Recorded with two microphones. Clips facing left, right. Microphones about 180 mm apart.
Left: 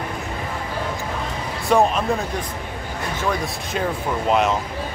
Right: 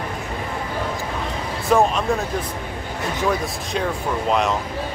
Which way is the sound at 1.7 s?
Centre (ahead or behind).